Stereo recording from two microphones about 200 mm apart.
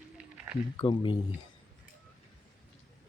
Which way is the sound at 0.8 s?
25° left (ahead or behind).